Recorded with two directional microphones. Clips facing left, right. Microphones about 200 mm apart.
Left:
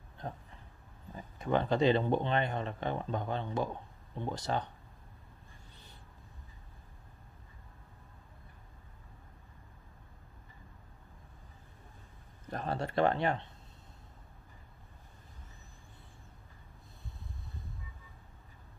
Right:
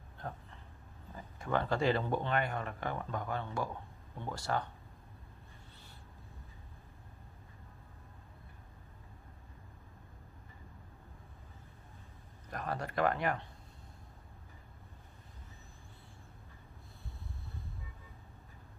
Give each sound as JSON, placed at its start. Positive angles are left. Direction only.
{"t": 0.2, "sound": "speech", "side_deg": 20}
{"t": 12.4, "sound": "speech", "side_deg": 30}